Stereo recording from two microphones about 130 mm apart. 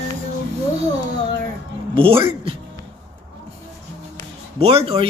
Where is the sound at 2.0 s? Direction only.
45° right (ahead or behind).